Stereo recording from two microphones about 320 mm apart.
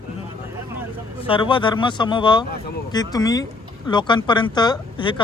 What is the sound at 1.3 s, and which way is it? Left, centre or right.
Speech, centre.